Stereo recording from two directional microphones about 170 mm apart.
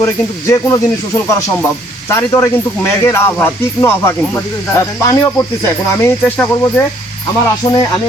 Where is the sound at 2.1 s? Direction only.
15° left (ahead or behind).